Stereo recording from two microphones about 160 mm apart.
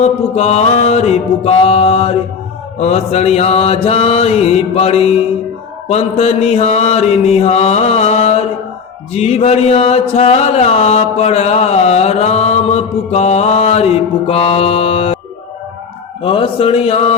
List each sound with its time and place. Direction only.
0.0 s mantra: 40° left (ahead or behind)
16.2 s mantra: 30° left (ahead or behind)